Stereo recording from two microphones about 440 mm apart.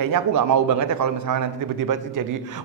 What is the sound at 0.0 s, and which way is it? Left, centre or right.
A man's voice, right.